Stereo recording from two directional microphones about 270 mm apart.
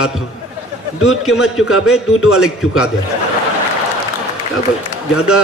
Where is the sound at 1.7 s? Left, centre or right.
Left.